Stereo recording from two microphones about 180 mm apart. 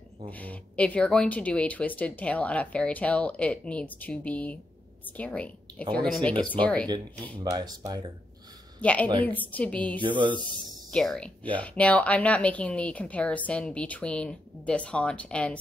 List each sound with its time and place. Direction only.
0.3 s a woman's voice: 10° left (ahead or behind)
7.4 s speech: 20° right (ahead or behind)
8.8 s speech: 10° left (ahead or behind)
10.0 s speech: 25° right (ahead or behind)
10.9 s speech: 5° left (ahead or behind)